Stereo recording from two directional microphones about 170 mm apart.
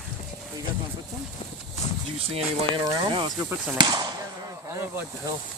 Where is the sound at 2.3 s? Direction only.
30° right (ahead or behind).